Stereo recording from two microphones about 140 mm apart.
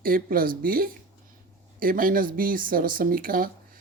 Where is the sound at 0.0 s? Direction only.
90° right.